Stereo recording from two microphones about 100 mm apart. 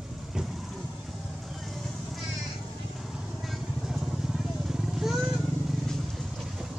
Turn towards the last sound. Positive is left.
turn(degrees=0)  # may be behind; listen again after turning